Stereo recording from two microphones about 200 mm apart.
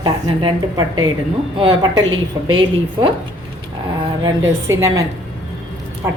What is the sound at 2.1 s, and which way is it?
Speech, 90° right.